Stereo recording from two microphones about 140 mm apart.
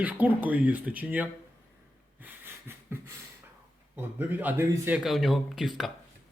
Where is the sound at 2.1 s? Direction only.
15° right (ahead or behind).